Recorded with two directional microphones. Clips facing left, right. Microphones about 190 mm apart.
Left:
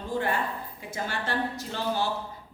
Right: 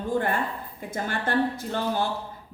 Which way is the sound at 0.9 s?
50° right (ahead or behind).